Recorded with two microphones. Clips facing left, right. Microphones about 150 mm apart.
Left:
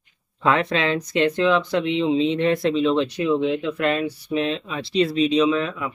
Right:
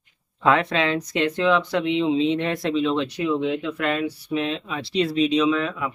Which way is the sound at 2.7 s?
30° left (ahead or behind).